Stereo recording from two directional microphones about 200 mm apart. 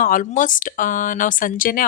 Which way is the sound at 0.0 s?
40° left (ahead or behind).